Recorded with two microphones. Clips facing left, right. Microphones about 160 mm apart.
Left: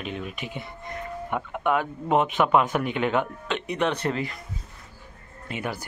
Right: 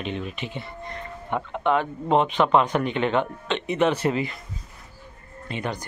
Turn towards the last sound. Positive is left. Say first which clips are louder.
# right 2 dB
turn(degrees=10)  # may be behind; listen again after turning